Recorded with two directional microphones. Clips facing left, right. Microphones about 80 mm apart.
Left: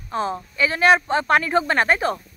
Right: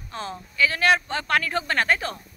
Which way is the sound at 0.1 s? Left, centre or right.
Left.